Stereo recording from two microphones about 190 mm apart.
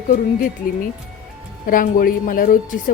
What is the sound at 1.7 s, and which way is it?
Speech, 45° left (ahead or behind).